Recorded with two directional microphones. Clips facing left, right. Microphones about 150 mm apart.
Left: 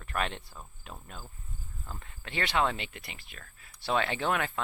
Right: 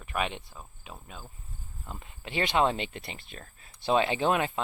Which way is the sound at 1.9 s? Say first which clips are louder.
Right 4 dB; 15° right (ahead or behind).